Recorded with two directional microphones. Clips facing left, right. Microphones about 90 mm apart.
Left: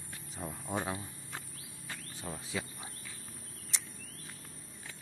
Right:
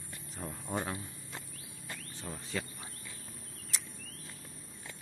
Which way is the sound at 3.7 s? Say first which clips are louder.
Even; centre (ahead or behind).